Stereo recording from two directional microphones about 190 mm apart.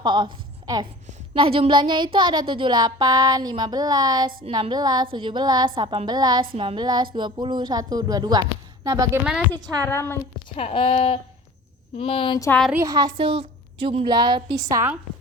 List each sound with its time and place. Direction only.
0.0 s a woman's voice: 25° right (ahead or behind)
1.3 s speech: 30° right (ahead or behind)
9.8 s a woman's voice: 10° left (ahead or behind)
10.5 s speech: 30° left (ahead or behind)
12.5 s a woman's voice: 5° left (ahead or behind)
12.7 s speech: 15° right (ahead or behind)